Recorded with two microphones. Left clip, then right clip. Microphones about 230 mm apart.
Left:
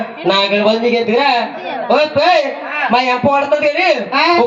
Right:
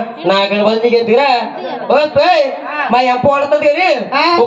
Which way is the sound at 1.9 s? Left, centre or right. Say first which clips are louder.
Right 2 dB; right.